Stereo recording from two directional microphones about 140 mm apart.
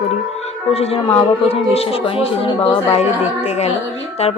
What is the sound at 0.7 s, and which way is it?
Speech, 45° left (ahead or behind).